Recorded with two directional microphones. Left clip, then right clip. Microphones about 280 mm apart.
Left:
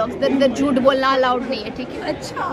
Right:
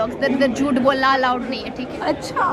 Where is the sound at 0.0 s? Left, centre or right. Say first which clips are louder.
Left 1 dB; centre.